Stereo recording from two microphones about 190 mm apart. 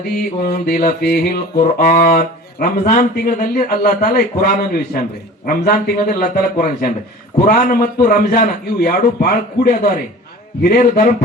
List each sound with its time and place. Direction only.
0.2 s a man's voice: 55° left (ahead or behind)